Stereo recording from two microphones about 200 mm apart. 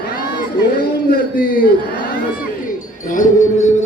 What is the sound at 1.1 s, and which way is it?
Speech, 45° left (ahead or behind).